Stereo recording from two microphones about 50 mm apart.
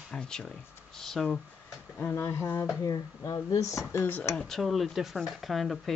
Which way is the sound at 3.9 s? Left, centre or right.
Left.